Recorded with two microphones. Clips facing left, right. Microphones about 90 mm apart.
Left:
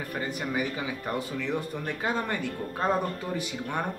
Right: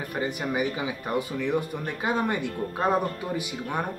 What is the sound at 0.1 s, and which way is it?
Speech, 15° right (ahead or behind).